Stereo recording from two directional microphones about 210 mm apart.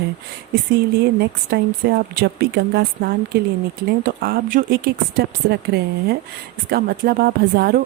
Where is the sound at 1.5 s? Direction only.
50° right (ahead or behind).